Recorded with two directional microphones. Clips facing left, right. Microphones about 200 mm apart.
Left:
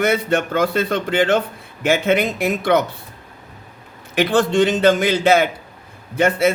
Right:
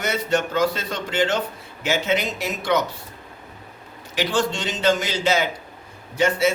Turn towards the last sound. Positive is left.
turn(degrees=55)  # may be behind; listen again after turning